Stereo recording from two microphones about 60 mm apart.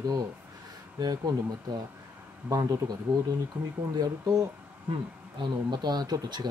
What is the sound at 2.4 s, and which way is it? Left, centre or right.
Speech, right.